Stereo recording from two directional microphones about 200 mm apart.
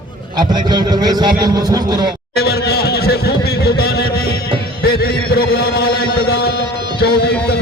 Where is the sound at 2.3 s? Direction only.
50° left (ahead or behind).